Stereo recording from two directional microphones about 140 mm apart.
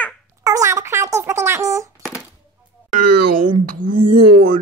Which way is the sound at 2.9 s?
90° right.